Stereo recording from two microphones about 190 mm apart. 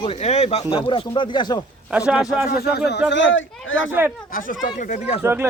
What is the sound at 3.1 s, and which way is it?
Speech, 75° left (ahead or behind).